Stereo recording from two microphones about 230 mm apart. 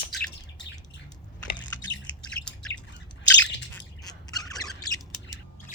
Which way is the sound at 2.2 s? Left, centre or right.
Centre.